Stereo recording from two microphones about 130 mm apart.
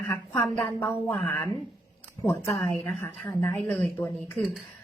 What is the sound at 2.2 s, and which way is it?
A woman's voice, 25° left (ahead or behind).